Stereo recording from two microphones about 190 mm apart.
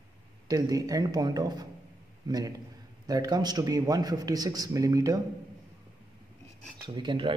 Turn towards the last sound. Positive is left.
turn(degrees=-25)  # may be behind; listen again after turning